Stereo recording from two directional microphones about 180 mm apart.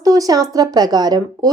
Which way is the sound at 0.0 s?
20° right (ahead or behind).